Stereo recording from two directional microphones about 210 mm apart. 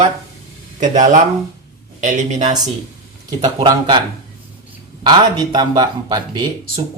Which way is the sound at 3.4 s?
20° right (ahead or behind).